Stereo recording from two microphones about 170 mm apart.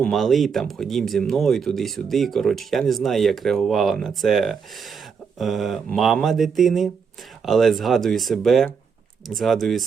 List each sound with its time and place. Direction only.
0.0 s speech: centre (ahead or behind)